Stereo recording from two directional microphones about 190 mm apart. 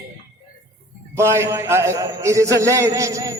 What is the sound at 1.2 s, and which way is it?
A man's voice, 15° right (ahead or behind).